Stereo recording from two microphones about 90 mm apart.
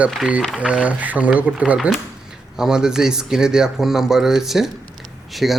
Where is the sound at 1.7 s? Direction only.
5° right (ahead or behind).